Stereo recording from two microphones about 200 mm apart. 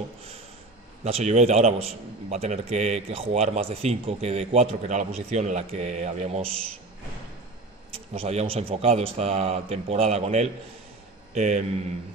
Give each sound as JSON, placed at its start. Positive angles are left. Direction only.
{"t": 1.0, "sound": "a man's voice", "side_deg": -35}
{"t": 7.9, "sound": "a man's voice", "side_deg": -30}